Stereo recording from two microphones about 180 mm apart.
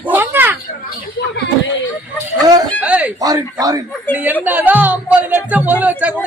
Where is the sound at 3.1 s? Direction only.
20° right (ahead or behind).